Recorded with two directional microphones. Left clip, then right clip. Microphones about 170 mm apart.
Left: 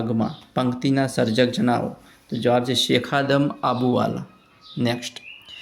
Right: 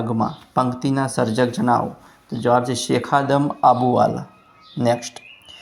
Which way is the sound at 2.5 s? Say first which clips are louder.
Right 2 dB; 25° left (ahead or behind).